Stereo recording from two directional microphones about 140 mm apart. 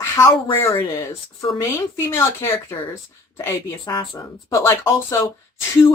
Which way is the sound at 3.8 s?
30° left (ahead or behind).